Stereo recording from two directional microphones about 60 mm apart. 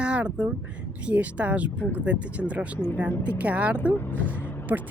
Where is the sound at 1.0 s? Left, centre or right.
Right.